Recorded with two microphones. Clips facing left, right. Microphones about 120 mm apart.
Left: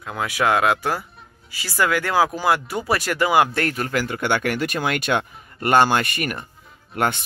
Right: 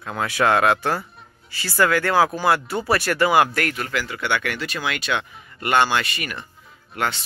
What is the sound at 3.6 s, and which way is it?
Speech, 40° left (ahead or behind).